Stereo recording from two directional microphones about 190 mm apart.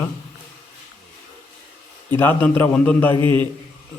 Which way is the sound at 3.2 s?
25° right (ahead or behind).